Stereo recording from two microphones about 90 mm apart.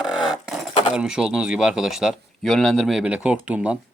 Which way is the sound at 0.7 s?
75° left (ahead or behind).